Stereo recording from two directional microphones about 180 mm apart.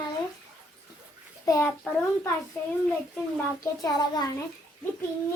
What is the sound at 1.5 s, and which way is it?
Speech, 15° left (ahead or behind).